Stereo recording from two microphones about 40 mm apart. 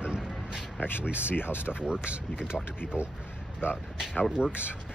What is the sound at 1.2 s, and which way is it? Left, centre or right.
Speech, left.